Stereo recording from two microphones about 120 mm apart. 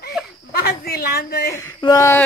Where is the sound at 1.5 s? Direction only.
25° left (ahead or behind).